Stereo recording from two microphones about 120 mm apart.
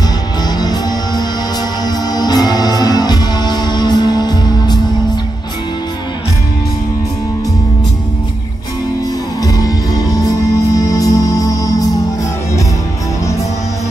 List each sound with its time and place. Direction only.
0.6 s music: 35° left (ahead or behind)
9.4 s music: 30° left (ahead or behind)